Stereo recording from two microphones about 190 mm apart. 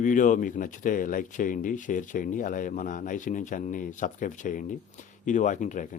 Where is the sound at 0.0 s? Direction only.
45° left (ahead or behind).